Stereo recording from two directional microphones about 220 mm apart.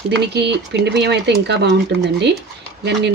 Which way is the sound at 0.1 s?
50° right (ahead or behind).